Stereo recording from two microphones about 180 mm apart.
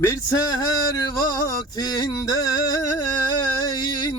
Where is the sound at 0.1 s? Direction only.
20° left (ahead or behind).